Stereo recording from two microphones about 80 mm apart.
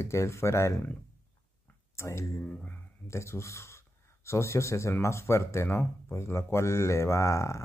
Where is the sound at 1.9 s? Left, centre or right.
Left.